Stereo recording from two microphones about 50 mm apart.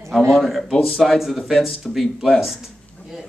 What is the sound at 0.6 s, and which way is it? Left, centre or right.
Speech, centre.